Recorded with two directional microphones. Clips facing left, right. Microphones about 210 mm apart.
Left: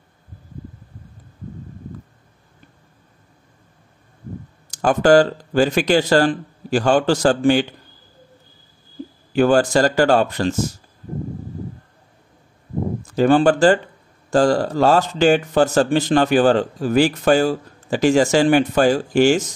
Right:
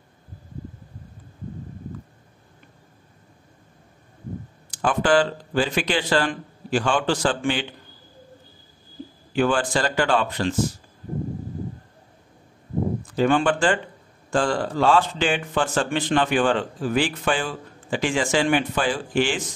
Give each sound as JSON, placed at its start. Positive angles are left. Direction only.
{"t": 4.6, "sound": "speech", "side_deg": 40}
{"t": 9.3, "sound": "speech", "side_deg": 40}
{"t": 13.0, "sound": "speech", "side_deg": 45}